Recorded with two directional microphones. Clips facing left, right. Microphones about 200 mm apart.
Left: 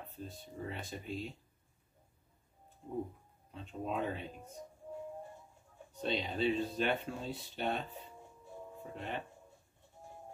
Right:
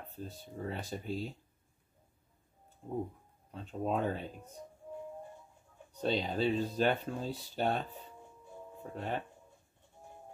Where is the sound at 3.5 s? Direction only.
40° right (ahead or behind).